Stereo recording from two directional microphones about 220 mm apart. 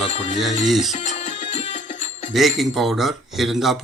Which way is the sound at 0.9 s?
30° left (ahead or behind).